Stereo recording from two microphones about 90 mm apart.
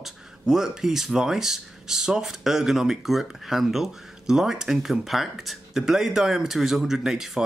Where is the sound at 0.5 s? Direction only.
5° right (ahead or behind).